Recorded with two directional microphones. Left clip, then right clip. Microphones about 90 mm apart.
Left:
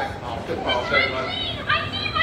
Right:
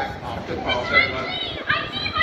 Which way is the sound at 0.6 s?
50° left (ahead or behind).